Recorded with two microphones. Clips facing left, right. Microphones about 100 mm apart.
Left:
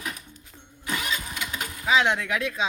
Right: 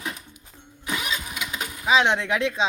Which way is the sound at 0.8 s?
15° right (ahead or behind).